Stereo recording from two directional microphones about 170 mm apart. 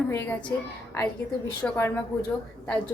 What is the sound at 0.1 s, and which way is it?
Speech, 10° left (ahead or behind).